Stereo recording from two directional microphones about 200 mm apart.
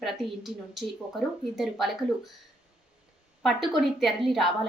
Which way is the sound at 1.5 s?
Centre (ahead or behind).